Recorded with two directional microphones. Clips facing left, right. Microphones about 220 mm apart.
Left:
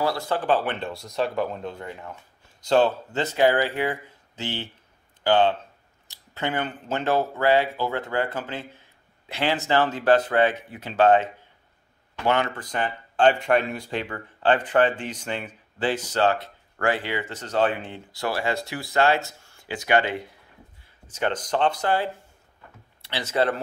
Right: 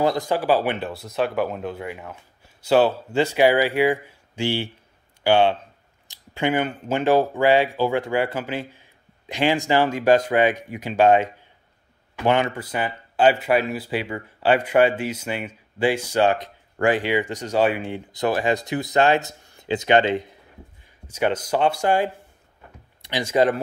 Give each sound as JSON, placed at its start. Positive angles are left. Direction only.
{"t": 0.0, "sound": "speech", "side_deg": -15}
{"t": 12.3, "sound": "speech", "side_deg": -15}
{"t": 21.1, "sound": "speech", "side_deg": -10}